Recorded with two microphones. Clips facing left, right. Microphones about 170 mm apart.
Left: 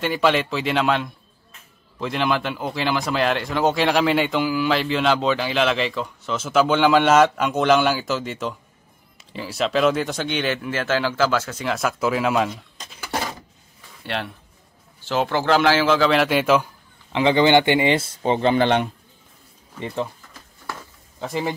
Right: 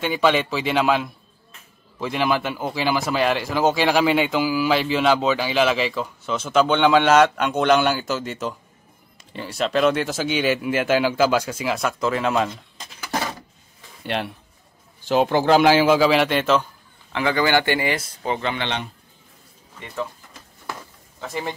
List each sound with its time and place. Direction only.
0.0 s speech: centre (ahead or behind)
11.7 s speech: 5° left (ahead or behind)
14.0 s a man's voice: 15° right (ahead or behind)
16.1 s a man's voice: 5° left (ahead or behind)
17.1 s speech: 20° left (ahead or behind)
21.2 s a man's voice: 15° left (ahead or behind)